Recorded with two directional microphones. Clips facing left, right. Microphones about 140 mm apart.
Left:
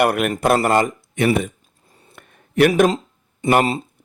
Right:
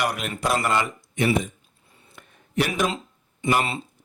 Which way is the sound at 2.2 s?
55° left (ahead or behind).